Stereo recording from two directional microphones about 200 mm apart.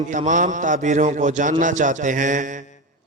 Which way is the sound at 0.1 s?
40° right (ahead or behind).